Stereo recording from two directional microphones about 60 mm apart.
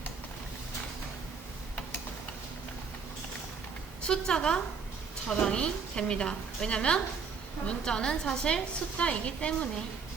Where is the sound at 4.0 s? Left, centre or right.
Centre.